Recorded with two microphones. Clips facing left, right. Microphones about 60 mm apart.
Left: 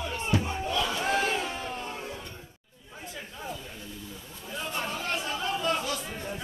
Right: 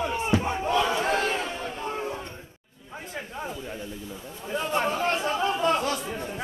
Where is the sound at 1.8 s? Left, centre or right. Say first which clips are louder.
Right 6 dB; right.